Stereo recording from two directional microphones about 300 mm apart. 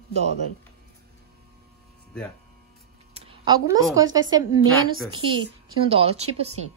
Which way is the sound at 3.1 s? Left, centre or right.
Centre.